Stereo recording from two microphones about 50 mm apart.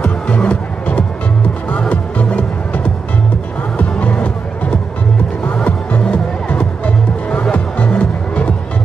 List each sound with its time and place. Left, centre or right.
0.4 s music: left